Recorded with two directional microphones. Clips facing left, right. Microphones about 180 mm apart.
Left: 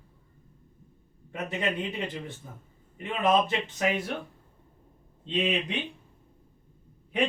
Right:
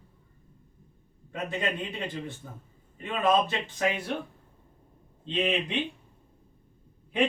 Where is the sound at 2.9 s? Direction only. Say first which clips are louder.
Even; 20° left (ahead or behind).